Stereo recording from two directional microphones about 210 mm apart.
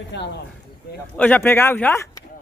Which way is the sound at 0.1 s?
55° left (ahead or behind).